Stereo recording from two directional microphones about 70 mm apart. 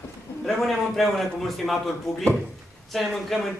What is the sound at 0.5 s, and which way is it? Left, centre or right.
Speech, centre.